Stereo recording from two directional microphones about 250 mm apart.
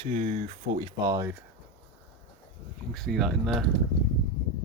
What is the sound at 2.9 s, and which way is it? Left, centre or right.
Speech, centre.